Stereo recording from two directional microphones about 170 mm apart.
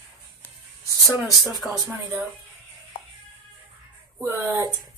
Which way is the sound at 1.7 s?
15° right (ahead or behind).